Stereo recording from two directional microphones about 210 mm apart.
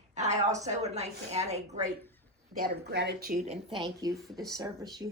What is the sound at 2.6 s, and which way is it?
Speech, 50° right (ahead or behind).